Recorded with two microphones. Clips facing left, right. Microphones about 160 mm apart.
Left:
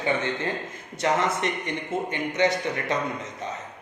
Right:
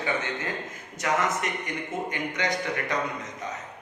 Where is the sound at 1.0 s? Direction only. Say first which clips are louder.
Left 3 dB; 30° left (ahead or behind).